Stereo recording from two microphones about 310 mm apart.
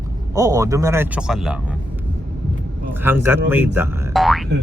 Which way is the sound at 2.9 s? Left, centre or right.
Centre.